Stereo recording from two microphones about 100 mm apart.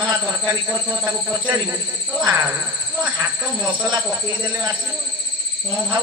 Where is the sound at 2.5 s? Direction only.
15° right (ahead or behind).